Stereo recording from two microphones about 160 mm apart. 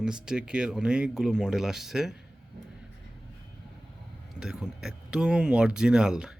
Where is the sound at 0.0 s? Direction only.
5° right (ahead or behind).